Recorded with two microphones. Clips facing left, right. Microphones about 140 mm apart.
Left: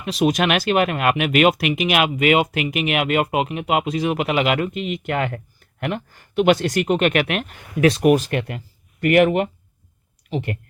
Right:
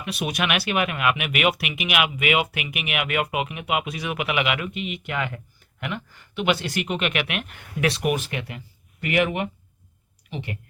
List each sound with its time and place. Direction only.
0.0 s speech: 40° left (ahead or behind)
8.3 s speech: 55° left (ahead or behind)